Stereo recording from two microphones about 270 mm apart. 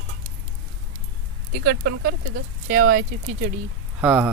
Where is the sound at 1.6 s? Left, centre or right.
Right.